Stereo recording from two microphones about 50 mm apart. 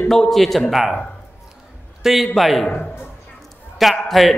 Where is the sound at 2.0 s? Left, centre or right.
Centre.